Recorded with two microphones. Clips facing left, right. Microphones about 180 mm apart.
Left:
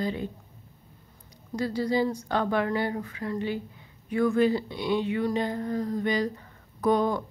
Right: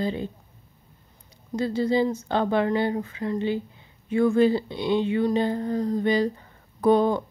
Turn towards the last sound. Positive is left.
turn(degrees=-30)  # may be behind; listen again after turning